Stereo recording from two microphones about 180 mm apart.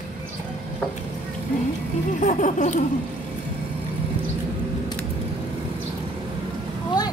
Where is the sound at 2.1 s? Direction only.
45° left (ahead or behind).